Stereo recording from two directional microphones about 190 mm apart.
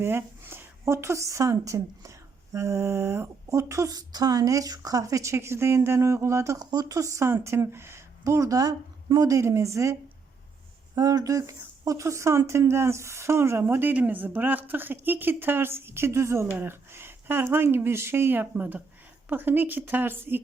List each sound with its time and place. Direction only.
0.0 s speech: 10° right (ahead or behind)